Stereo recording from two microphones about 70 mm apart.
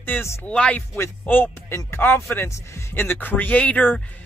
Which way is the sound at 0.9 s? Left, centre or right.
Left.